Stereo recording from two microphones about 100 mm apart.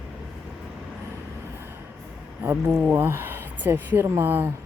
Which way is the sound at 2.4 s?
25° right (ahead or behind).